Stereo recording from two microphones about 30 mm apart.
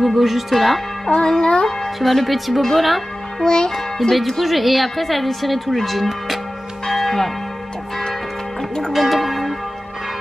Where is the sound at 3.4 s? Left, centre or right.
Left.